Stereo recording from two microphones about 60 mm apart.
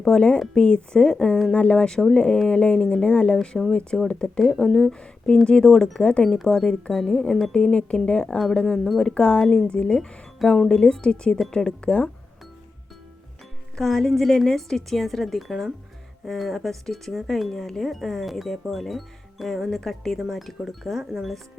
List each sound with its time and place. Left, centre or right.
0.0 s speech: centre
6.2 s speech: centre
13.7 s speech: centre